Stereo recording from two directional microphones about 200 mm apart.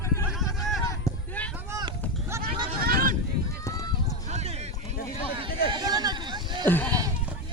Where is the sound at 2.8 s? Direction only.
50° right (ahead or behind).